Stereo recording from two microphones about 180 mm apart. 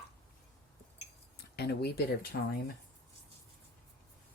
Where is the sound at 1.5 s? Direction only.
65° left (ahead or behind).